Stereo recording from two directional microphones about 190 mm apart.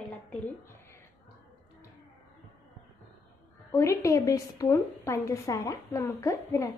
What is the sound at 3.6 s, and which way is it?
A woman's voice, 15° left (ahead or behind).